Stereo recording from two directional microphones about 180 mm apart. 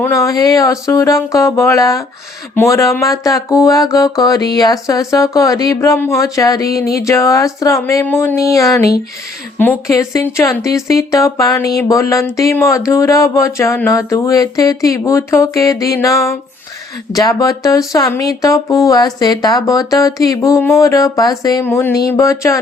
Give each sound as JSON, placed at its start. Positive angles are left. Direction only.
{"t": 0.0, "sound": "music", "side_deg": 15}
{"t": 17.1, "sound": "speech", "side_deg": 20}
{"t": 22.1, "sound": "music", "side_deg": 15}